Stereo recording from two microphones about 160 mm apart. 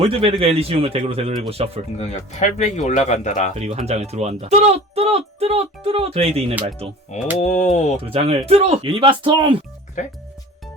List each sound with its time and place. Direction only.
0.0 s speech: 35° right (ahead or behind)
2.0 s speech: 45° left (ahead or behind)
3.5 s speech: 40° right (ahead or behind)
7.3 s speech: 50° left (ahead or behind)
8.0 s speech: 35° right (ahead or behind)
10.0 s speech: 50° left (ahead or behind)